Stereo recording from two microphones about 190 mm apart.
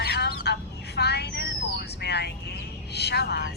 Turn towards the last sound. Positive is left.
turn(degrees=60)  # may be behind; listen again after turning